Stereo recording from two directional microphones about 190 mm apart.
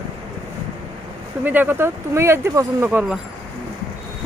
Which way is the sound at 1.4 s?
10° right (ahead or behind).